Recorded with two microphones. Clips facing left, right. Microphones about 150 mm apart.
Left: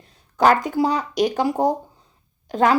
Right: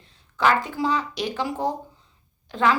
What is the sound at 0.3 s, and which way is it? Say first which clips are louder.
A woman's voice: left 5 dB; 45° left (ahead or behind).